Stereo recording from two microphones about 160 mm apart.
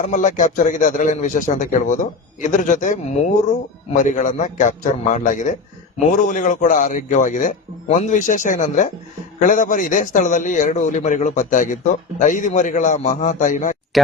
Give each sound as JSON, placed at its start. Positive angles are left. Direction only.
{"t": 0.0, "sound": "a man's voice", "side_deg": 50}
{"t": 13.9, "sound": "speech", "side_deg": 0}